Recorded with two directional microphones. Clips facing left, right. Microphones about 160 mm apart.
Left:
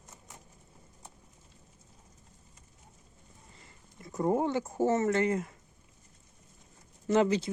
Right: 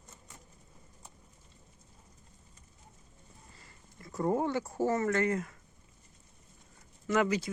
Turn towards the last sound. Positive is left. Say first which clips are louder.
# left 3 dB
turn(degrees=25)  # may be behind; listen again after turning